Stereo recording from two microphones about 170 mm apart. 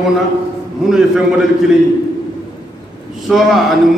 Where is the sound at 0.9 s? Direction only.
5° right (ahead or behind).